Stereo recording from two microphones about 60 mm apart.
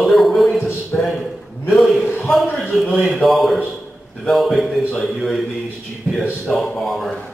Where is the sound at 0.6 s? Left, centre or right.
Left.